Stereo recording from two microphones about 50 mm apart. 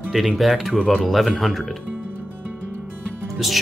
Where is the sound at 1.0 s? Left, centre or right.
Centre.